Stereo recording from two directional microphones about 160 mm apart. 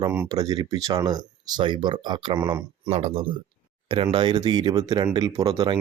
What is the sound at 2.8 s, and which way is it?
Speech, 40° right (ahead or behind).